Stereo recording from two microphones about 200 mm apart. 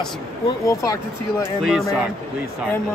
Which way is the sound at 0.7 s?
15° left (ahead or behind).